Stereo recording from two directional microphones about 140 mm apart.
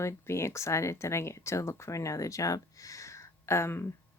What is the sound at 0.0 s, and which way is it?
Speech, 20° left (ahead or behind).